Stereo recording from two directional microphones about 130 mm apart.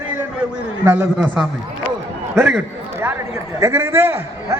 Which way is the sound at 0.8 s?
15° right (ahead or behind).